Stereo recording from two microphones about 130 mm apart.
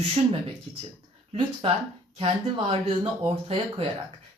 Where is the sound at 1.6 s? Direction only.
45° right (ahead or behind).